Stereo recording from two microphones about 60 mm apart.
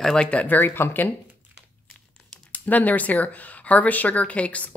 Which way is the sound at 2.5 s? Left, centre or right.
Left.